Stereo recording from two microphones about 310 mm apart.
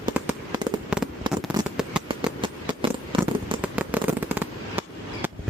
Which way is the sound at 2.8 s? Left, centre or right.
Centre.